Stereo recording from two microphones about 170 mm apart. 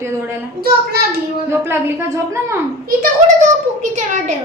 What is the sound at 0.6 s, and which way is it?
Speech, 65° right (ahead or behind).